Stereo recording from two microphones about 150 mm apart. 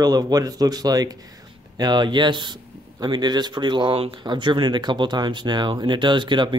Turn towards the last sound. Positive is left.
turn(degrees=-30)  # may be behind; listen again after turning